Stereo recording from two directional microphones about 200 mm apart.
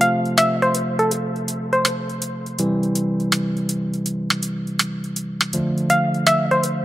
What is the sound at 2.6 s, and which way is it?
Music, centre (ahead or behind).